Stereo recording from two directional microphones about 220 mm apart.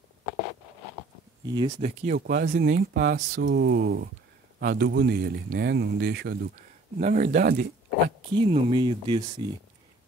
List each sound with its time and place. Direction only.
1.4 s speech: 20° right (ahead or behind)
1.8 s speech: 30° right (ahead or behind)
2.1 s speech: 40° right (ahead or behind)
7.0 s speech: 35° right (ahead or behind)
8.4 s speech: 25° right (ahead or behind)